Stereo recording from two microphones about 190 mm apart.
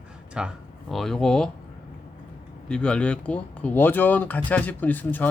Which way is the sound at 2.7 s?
5° left (ahead or behind).